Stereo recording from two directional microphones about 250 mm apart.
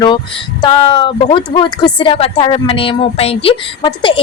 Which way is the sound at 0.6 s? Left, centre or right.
Centre.